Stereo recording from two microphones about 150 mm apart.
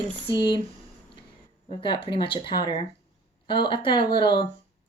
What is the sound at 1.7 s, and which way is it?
Speech, 35° left (ahead or behind).